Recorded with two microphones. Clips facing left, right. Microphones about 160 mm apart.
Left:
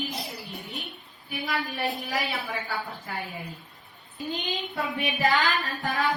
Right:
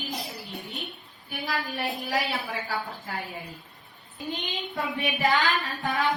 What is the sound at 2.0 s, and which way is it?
Speech, 40° right (ahead or behind).